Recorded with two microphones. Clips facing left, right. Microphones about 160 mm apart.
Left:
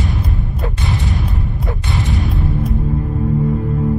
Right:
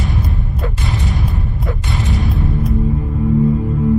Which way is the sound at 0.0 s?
Centre (ahead or behind).